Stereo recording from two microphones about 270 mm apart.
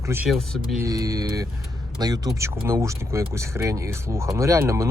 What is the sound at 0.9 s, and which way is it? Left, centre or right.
Speech, centre.